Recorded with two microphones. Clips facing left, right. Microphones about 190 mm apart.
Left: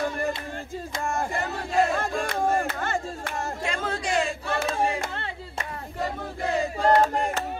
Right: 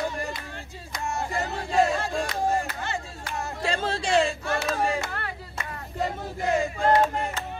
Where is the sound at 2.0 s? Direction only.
55° left (ahead or behind).